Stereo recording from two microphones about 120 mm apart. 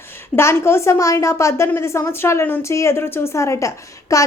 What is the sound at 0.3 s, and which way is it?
A woman's voice, 20° left (ahead or behind).